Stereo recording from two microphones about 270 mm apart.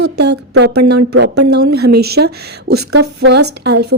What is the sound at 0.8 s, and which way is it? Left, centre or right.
Speech, right.